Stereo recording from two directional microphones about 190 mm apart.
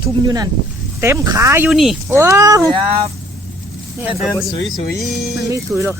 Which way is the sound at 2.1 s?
15° right (ahead or behind).